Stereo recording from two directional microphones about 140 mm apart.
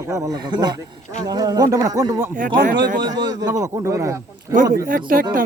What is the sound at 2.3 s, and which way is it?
Speech, 70° right (ahead or behind).